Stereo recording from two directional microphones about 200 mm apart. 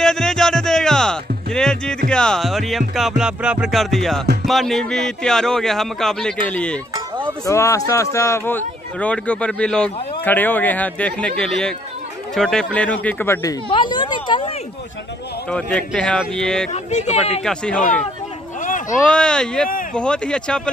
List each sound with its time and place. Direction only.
0.0 s music: centre (ahead or behind)
2.0 s a man's voice: 5° left (ahead or behind); by 14.5 s 25° left (ahead or behind)
15.5 s a man's voice: 5° left (ahead or behind)
16.7 s speech: 35° left (ahead or behind)
17.4 s a man's voice: 5° left (ahead or behind)
18.6 s a sound: 40° left (ahead or behind)
18.9 s a man's voice: 5° left (ahead or behind)